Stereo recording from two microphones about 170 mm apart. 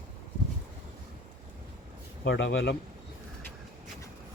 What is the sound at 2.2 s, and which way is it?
Speech, 90° left.